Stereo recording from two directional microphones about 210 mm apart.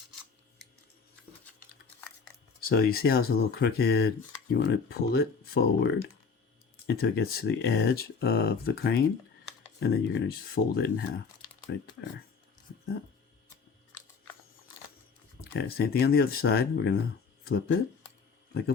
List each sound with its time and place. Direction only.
2.6 s speech: 45° left (ahead or behind)
15.4 s speech: 50° left (ahead or behind)